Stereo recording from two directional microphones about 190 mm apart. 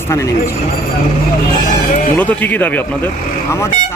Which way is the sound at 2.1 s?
10° left (ahead or behind).